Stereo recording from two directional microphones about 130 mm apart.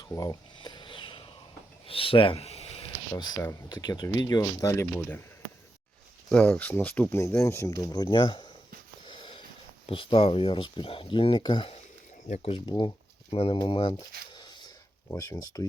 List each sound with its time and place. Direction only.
0.0 s a sound: 30° left (ahead or behind)
1.9 s speech: 45° left (ahead or behind)
3.1 s speech: 30° left (ahead or behind)
4.9 s speech: 15° left (ahead or behind)
6.3 s speech: 15° left (ahead or behind); by 11.7 s 35° left (ahead or behind)
12.3 s speech: 50° left (ahead or behind)
12.6 s speech: 35° left (ahead or behind)
13.3 s speech: 45° left (ahead or behind); by 15.6 s 30° left (ahead or behind)